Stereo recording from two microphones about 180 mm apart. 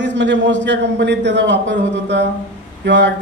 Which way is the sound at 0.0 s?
80° right.